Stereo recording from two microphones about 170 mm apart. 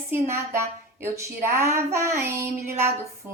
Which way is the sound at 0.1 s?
15° right (ahead or behind).